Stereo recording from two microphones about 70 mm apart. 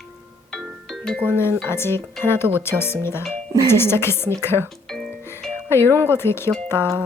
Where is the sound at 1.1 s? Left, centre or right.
Centre.